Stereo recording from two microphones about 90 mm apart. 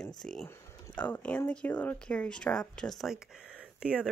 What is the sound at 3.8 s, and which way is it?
Speech, 10° right (ahead or behind).